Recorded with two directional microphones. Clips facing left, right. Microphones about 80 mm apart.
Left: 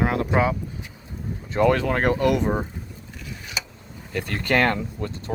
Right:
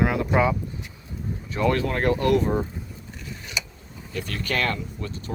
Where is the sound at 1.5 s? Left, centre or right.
Left.